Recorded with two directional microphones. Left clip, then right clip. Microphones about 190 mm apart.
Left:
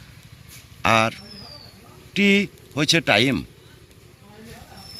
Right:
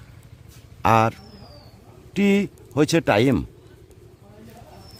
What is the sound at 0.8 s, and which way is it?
A man's voice, 40° right (ahead or behind).